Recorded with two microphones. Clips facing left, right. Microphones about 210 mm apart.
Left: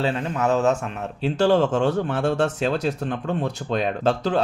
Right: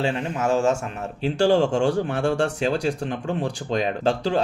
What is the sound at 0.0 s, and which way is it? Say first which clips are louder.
Speech: left 1 dB; 10° right (ahead or behind).